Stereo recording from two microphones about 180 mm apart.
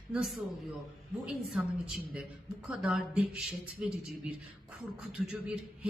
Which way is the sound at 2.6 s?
5° right (ahead or behind).